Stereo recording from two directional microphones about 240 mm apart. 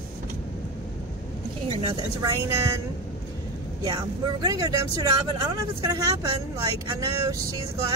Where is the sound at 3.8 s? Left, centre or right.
Centre.